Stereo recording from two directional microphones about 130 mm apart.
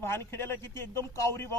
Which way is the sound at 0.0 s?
20° left (ahead or behind).